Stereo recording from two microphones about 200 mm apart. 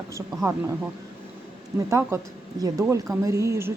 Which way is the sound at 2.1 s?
15° right (ahead or behind).